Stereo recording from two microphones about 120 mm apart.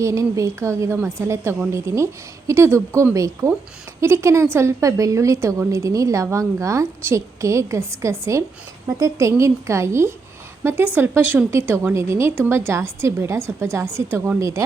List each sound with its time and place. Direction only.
0.0 s a woman's voice: 25° right (ahead or behind)